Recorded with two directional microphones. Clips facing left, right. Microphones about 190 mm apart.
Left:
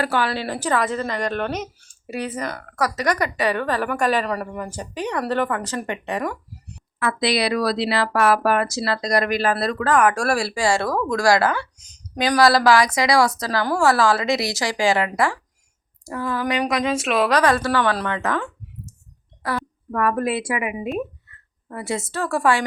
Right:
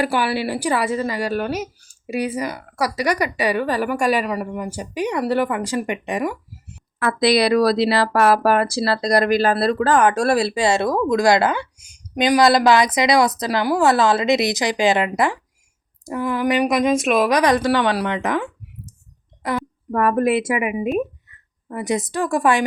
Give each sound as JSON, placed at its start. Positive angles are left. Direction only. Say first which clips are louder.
{"t": 0.0, "sound": "speech", "louder": "right 2 dB", "side_deg": -10}
{"t": 7.0, "sound": "speech", "louder": "right 4 dB", "side_deg": -40}
{"t": 17.9, "sound": "a sound", "louder": "right 3 dB", "side_deg": -15}
{"t": 19.9, "sound": "speech", "louder": "right 4 dB", "side_deg": -25}